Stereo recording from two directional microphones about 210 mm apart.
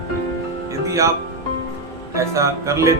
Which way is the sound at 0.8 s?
15° right (ahead or behind).